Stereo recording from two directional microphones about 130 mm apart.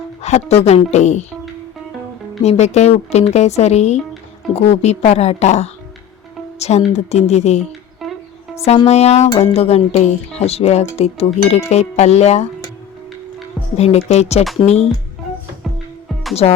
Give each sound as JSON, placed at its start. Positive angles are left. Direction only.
{"t": 0.2, "sound": "speech", "side_deg": 60}
{"t": 2.4, "sound": "speech", "side_deg": 55}
{"t": 8.0, "sound": "music", "side_deg": 0}
{"t": 8.9, "sound": "speech", "side_deg": 55}
{"t": 13.7, "sound": "speech", "side_deg": 55}
{"t": 16.4, "sound": "speech", "side_deg": 50}